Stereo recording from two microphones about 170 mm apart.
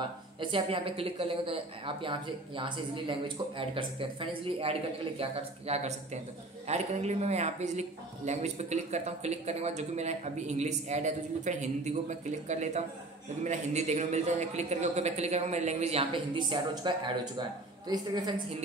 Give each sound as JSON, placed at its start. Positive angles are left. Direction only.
{"t": 0.4, "sound": "a woman's voice", "side_deg": -30}